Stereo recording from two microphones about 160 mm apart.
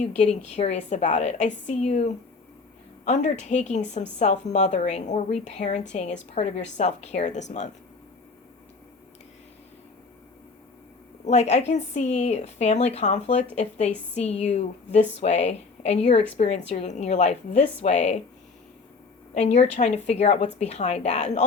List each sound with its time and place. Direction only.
0.0 s speech: 45° left (ahead or behind)
11.3 s speech: 40° left (ahead or behind)
19.3 s speech: 45° left (ahead or behind)